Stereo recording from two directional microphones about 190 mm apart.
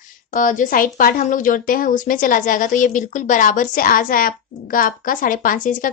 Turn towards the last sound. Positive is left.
turn(degrees=45)  # may be behind; listen again after turning